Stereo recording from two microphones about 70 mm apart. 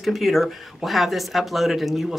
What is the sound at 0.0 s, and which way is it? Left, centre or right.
Speech, centre.